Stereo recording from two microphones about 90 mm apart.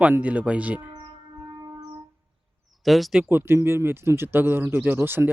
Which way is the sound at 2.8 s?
Centre (ahead or behind).